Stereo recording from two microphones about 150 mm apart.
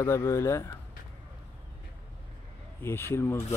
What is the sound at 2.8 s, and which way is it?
Speech, 15° left (ahead or behind).